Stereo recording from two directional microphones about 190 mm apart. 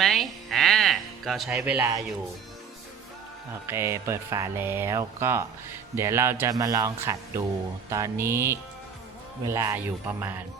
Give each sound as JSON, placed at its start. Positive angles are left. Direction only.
{"t": 0.0, "sound": "music", "side_deg": 0}
{"t": 3.7, "sound": "speech", "side_deg": -15}